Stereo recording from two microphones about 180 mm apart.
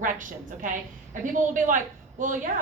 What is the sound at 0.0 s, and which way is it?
A woman's voice, 45° right (ahead or behind).